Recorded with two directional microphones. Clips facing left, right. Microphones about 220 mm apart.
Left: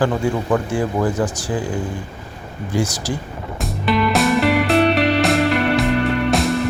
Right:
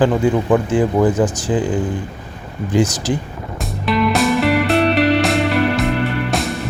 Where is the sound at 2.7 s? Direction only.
20° right (ahead or behind).